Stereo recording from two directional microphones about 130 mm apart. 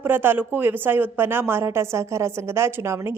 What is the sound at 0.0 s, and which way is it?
A woman's voice, 15° right (ahead or behind).